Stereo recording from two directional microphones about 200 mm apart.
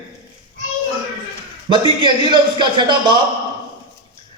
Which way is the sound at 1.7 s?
25° right (ahead or behind).